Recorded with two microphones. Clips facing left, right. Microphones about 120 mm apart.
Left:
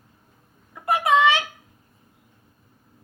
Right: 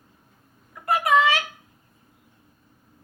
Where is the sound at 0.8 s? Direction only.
25° left (ahead or behind).